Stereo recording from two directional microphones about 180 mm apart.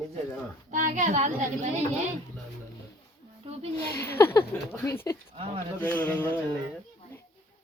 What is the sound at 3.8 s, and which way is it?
Speech, 15° left (ahead or behind).